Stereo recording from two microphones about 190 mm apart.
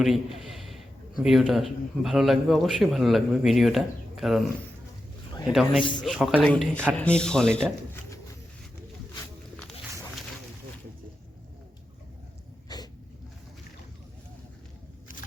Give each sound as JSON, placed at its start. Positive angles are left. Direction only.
{"t": 0.0, "sound": "a sound", "side_deg": 0}
{"t": 1.2, "sound": "a man's voice", "side_deg": 0}
{"t": 6.0, "sound": "a man's voice", "side_deg": 0}
{"t": 12.6, "sound": "dog", "side_deg": 20}